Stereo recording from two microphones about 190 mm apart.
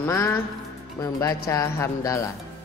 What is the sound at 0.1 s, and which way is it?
Speech, 15° left (ahead or behind).